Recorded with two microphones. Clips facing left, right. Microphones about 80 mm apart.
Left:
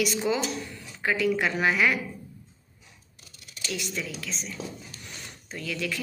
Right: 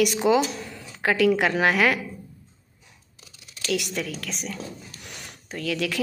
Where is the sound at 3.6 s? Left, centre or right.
Right.